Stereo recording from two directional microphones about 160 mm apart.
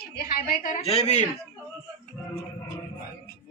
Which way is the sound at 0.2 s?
65° left (ahead or behind).